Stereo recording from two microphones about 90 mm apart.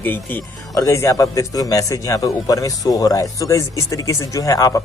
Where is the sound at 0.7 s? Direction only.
35° left (ahead or behind).